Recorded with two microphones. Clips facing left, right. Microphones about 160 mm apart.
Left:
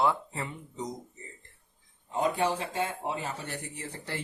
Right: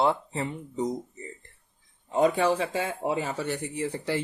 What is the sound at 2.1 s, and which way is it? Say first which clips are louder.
Speech: right 5 dB; 90° right.